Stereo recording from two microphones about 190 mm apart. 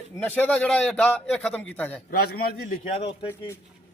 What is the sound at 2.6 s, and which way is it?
Speech, 40° left (ahead or behind).